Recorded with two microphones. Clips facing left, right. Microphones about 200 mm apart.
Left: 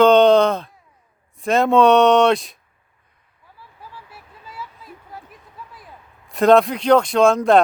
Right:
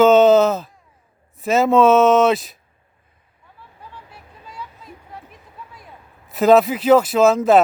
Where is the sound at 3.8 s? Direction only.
5° left (ahead or behind).